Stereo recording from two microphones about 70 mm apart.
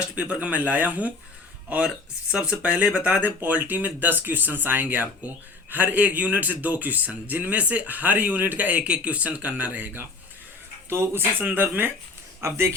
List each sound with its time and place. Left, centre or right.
0.0 s a man's voice: centre
12.4 s speech: right